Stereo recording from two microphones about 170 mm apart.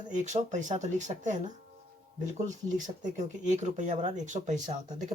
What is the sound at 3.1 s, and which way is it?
Speech, 45° right (ahead or behind).